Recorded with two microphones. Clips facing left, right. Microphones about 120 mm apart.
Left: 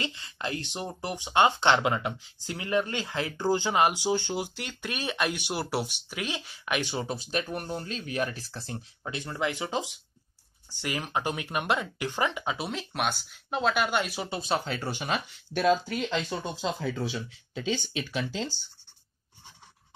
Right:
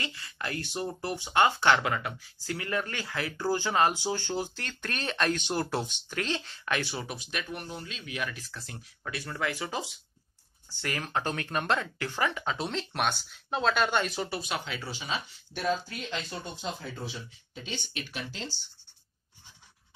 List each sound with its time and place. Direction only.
0.0 s speech: 25° left (ahead or behind)
14.3 s speech: 30° left (ahead or behind)
14.9 s speech: 60° left (ahead or behind); by 17.6 s 90° left